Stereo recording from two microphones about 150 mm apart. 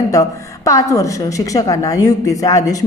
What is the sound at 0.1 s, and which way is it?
A woman's voice, 20° left (ahead or behind).